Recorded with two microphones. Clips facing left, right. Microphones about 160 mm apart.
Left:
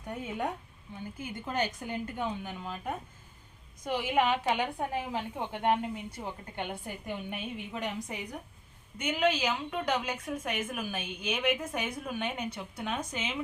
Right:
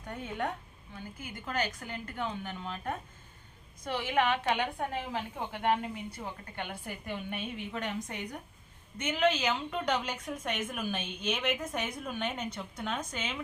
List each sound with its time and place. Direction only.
0.0 s a woman's voice: 15° left (ahead or behind)
0.9 s a woman's voice: 20° left (ahead or behind)